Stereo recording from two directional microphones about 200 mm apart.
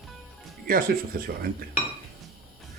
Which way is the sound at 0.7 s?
45° right (ahead or behind).